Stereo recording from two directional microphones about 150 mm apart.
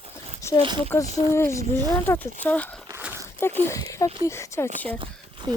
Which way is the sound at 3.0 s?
15° right (ahead or behind).